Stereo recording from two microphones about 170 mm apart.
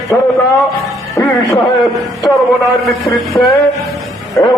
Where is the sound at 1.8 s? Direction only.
Centre (ahead or behind).